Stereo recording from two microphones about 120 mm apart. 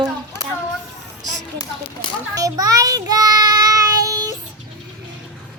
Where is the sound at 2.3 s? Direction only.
30° right (ahead or behind).